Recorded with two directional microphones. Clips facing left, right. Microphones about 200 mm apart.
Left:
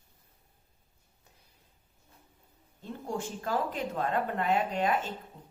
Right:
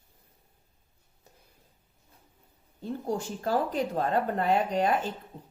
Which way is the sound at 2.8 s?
35° right (ahead or behind).